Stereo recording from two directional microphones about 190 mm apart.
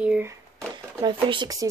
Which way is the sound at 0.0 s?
5° right (ahead or behind).